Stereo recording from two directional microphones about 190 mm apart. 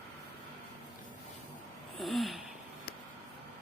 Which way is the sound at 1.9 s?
Centre (ahead or behind).